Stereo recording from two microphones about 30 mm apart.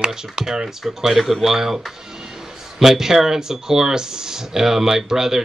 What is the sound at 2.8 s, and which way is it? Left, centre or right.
Speech, centre.